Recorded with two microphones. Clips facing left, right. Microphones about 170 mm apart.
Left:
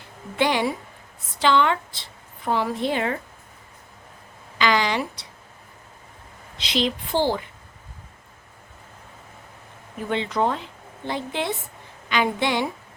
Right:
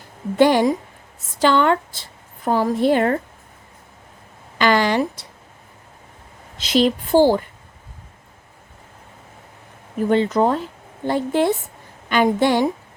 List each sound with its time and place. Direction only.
0.3 s a woman's voice: 45° right (ahead or behind)
4.5 s a woman's voice: 50° right (ahead or behind)
6.6 s a woman's voice: 45° right (ahead or behind)
10.1 s a woman's voice: 45° right (ahead or behind)